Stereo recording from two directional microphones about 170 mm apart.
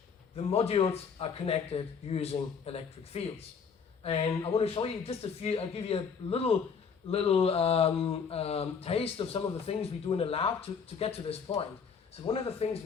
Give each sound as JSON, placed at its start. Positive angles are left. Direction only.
{"t": 0.3, "sound": "speech", "side_deg": 35}